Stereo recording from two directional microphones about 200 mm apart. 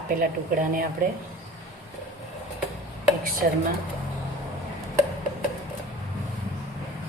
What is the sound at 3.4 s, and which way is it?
Speech, 45° right (ahead or behind).